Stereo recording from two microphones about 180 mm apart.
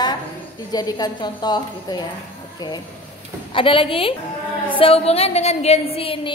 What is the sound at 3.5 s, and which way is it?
A woman's voice, 30° left (ahead or behind).